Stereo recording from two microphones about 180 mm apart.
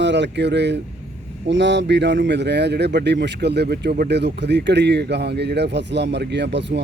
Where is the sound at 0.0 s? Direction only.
80° right.